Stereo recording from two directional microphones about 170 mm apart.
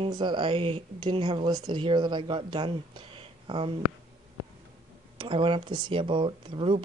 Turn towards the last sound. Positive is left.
turn(degrees=-30)  # may be behind; listen again after turning